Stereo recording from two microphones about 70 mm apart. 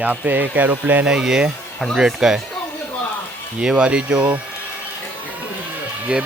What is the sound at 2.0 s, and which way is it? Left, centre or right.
Speech, centre.